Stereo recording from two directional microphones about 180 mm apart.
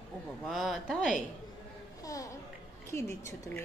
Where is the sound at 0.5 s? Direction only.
Centre (ahead or behind).